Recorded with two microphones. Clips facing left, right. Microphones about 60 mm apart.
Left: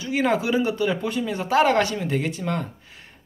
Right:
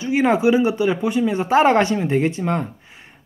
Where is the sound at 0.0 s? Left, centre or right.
Right.